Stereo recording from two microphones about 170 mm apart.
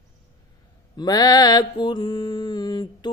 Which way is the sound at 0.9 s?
25° left (ahead or behind).